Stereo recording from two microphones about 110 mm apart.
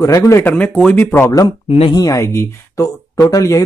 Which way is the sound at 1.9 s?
30° left (ahead or behind).